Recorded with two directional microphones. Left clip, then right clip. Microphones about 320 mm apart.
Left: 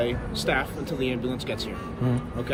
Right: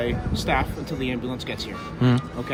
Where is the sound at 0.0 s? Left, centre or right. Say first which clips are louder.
Even; centre.